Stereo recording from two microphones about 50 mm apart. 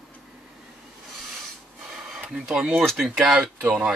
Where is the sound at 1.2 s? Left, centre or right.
Centre.